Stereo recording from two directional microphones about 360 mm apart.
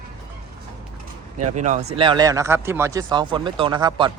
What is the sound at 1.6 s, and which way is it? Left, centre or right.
Speech, centre.